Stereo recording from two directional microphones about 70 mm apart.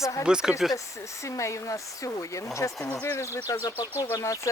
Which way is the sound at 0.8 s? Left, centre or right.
Left.